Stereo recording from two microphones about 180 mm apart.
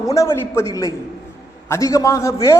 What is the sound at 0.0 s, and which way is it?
A man's voice, 20° left (ahead or behind).